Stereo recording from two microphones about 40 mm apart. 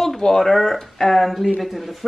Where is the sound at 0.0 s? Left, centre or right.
Centre.